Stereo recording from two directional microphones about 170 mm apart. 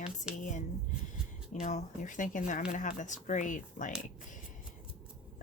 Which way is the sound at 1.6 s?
45° left (ahead or behind).